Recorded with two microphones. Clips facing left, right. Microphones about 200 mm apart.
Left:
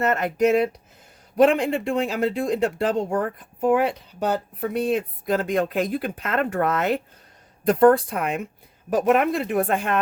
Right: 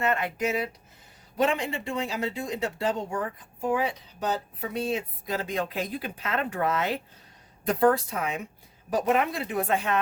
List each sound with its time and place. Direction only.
0.0 s speech: 45° left (ahead or behind)
0.4 s speech: 65° left (ahead or behind)